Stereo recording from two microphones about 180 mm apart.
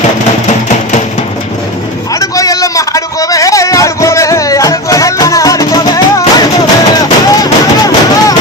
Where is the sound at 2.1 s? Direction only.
20° left (ahead or behind).